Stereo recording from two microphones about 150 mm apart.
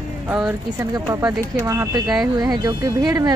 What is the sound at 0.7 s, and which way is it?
A woman's voice, 25° right (ahead or behind).